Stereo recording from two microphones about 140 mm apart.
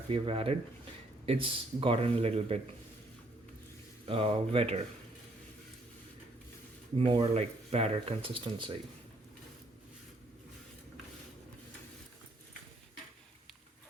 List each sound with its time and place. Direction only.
0.1 s speech: 40° right (ahead or behind)
4.0 s speech: 45° right (ahead or behind)
7.0 s speech: 40° right (ahead or behind)